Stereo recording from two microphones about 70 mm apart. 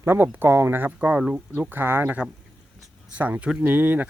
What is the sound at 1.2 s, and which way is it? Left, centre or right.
Speech, centre.